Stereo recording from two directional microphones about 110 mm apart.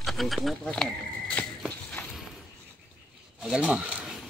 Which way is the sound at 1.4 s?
15° left (ahead or behind).